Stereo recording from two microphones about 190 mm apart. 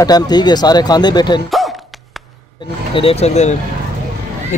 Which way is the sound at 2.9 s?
30° left (ahead or behind).